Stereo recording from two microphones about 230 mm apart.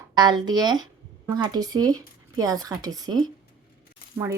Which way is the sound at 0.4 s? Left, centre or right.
Centre.